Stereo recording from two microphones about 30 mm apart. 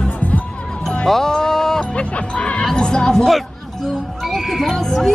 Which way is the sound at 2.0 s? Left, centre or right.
Left.